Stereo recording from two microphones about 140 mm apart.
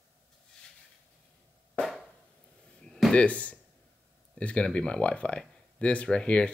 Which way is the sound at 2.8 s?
5° left (ahead or behind).